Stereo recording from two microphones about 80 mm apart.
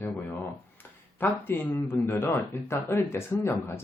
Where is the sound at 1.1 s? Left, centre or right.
Left.